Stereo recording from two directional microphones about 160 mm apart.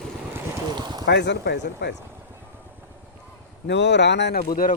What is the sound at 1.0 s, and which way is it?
Speech, 90° left.